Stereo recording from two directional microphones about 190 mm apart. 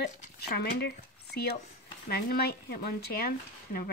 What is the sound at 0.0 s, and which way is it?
Speech, 55° left (ahead or behind).